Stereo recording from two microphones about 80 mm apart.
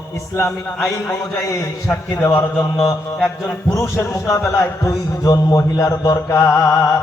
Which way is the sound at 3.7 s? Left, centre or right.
Left.